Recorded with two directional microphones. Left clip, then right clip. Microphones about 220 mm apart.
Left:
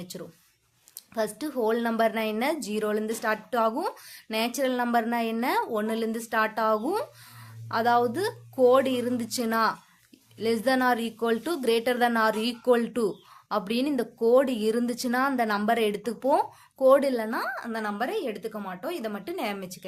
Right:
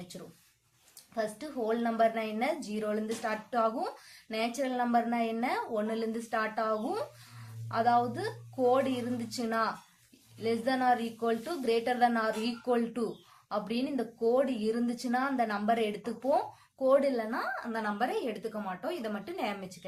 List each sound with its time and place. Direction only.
1.1 s speech: 50° left (ahead or behind)